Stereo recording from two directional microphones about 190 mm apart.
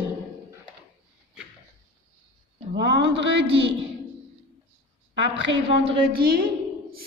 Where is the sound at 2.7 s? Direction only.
65° right (ahead or behind).